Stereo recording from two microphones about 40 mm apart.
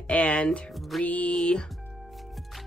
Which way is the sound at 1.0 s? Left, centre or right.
Left.